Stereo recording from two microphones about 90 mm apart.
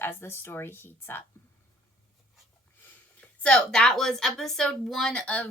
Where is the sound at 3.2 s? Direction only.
10° left (ahead or behind).